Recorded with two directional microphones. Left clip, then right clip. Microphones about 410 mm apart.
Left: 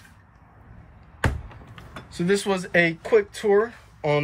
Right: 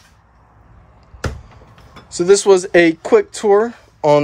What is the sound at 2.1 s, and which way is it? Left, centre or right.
Speech, centre.